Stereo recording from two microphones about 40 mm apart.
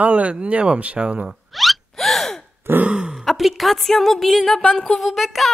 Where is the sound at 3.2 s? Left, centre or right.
Centre.